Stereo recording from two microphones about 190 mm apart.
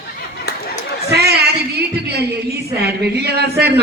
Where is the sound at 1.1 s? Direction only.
60° right (ahead or behind).